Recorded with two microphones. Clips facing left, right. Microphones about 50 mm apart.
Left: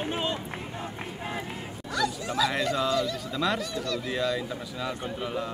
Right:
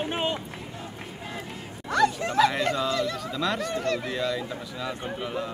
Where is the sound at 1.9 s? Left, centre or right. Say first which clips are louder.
Right 6 dB; right.